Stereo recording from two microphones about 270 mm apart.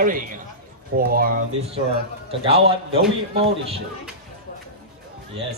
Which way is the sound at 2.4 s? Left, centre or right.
Right.